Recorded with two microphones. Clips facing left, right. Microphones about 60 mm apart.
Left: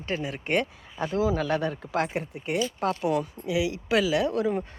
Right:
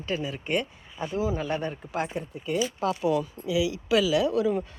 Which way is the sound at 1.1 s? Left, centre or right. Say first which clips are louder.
Left 3 dB; left.